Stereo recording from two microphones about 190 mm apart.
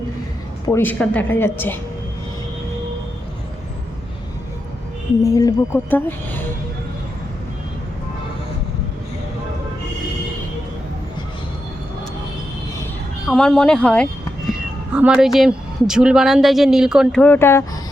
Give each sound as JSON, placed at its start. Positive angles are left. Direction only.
{"t": 0.6, "sound": "a woman's voice", "side_deg": 15}
{"t": 5.2, "sound": "a woman's voice", "side_deg": 15}
{"t": 13.2, "sound": "speech", "side_deg": 5}